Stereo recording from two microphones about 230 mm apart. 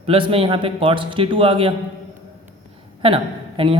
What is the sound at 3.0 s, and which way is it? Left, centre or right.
Speech, right.